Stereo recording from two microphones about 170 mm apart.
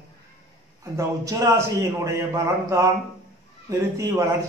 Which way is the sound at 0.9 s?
20° right (ahead or behind).